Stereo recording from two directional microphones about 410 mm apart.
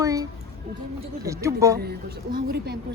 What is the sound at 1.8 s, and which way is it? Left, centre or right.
Speech, right.